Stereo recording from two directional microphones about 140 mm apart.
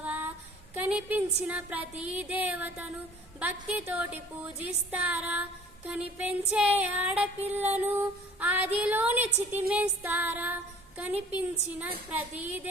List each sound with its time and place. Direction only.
0.0 s female singing: 10° right (ahead or behind)